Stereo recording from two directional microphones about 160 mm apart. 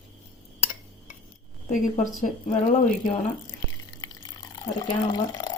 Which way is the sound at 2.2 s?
55° left (ahead or behind).